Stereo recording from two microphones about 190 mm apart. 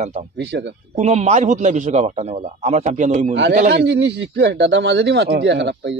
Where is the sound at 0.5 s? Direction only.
65° right (ahead or behind).